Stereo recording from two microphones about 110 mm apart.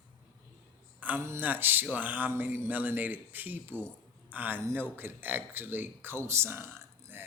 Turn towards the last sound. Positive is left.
turn(degrees=-20)  # may be behind; listen again after turning